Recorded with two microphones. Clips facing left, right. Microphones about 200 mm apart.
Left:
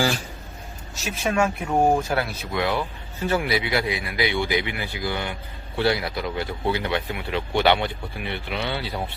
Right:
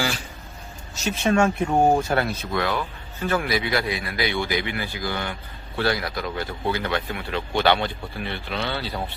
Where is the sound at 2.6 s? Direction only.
20° left (ahead or behind).